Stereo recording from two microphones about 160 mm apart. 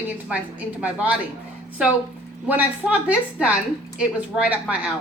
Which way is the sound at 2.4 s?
10° right (ahead or behind).